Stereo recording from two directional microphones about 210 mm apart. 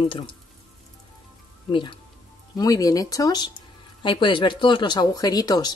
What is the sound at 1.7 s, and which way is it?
Speech, 25° left (ahead or behind).